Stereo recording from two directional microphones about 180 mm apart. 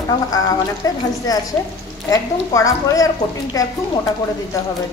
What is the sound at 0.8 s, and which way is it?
Speech, 20° left (ahead or behind).